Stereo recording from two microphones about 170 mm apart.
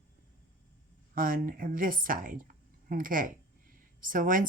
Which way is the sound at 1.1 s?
55° right (ahead or behind).